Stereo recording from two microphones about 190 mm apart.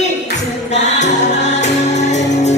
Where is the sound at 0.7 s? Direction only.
40° left (ahead or behind).